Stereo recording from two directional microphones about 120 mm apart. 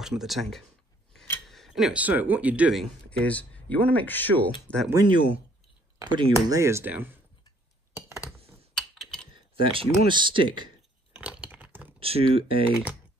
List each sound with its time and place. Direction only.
0.0 s speech: 5° right (ahead or behind)
3.1 s speech: 10° left (ahead or behind)
5.0 s speech: 40° right (ahead or behind)
6.3 s speech: 25° right (ahead or behind)
8.7 s typing: 5° left (ahead or behind)
9.3 s a sound: 45° right (ahead or behind)
10.0 s speech: 40° right (ahead or behind)
11.1 s a sound: 10° right (ahead or behind)
12.0 s speech: 55° right (ahead or behind)